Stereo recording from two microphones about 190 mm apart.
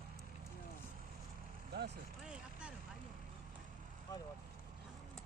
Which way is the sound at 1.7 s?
60° right (ahead or behind).